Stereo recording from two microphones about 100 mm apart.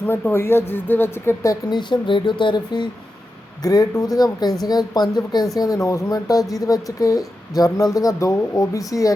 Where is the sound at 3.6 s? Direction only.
40° left (ahead or behind).